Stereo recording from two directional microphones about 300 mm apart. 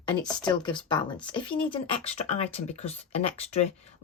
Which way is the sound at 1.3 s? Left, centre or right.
Centre.